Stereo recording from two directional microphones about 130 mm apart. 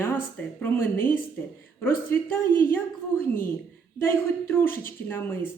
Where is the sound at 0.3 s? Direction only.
15° left (ahead or behind).